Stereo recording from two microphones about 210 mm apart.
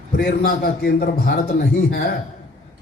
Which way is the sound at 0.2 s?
45° left (ahead or behind).